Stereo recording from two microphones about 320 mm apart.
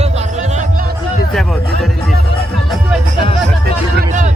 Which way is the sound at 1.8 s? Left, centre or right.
Centre.